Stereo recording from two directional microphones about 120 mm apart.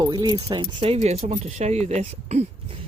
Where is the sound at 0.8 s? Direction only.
60° right (ahead or behind).